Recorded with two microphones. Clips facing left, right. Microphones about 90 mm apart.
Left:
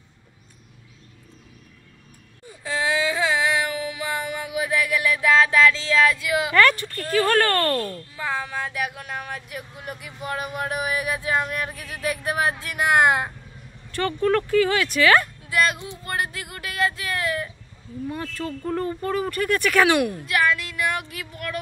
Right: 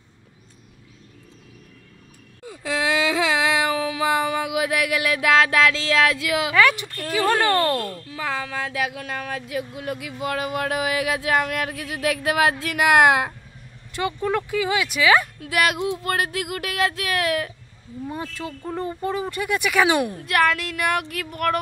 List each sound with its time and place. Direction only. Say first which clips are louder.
2.5 s child singing: right 1 dB; 90° right
6.5 s speech: left 1 dB; 10° right (ahead or behind)
8.1 s speech: right 3 dB; 90° right; by 13.3 s 75° right (ahead or behind)
13.9 s speech: left 2 dB; 10° right (ahead or behind)
15.4 s speech: right 2 dB; 70° right (ahead or behind)
18.0 s speech: left 1 dB; 20° right (ahead or behind)
20.2 s speech: right 2 dB; 55° right (ahead or behind)